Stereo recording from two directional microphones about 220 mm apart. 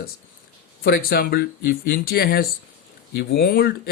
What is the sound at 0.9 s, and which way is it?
Speech, 45° left (ahead or behind).